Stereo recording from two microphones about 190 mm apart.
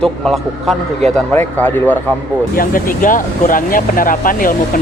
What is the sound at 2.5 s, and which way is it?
Speech, 45° left (ahead or behind).